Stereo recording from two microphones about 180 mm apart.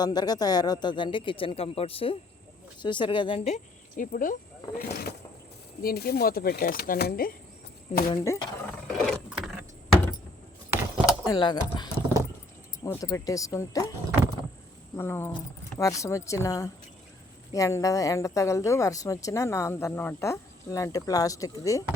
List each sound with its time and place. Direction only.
0.0 s speech: 20° left (ahead or behind); by 4.4 s 50° left (ahead or behind)
4.8 s speech: 60° left (ahead or behind)
8.1 s speech: 20° left (ahead or behind)
8.9 s vehicle: centre (ahead or behind)
10.7 s keys jangling: 10° right (ahead or behind)
11.3 s a woman's voice: 25° left (ahead or behind)
14.9 s a woman's voice: 15° left (ahead or behind)